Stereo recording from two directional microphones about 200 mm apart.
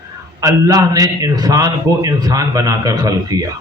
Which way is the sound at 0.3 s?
15° right (ahead or behind).